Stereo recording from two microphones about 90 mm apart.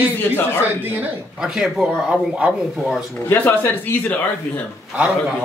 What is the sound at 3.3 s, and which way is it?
Speech, 20° left (ahead or behind).